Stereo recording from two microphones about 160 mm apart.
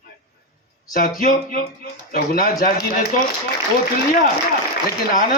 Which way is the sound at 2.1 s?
65° left (ahead or behind).